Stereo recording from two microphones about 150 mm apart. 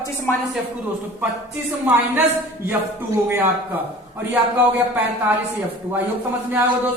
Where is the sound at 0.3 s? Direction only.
15° left (ahead or behind).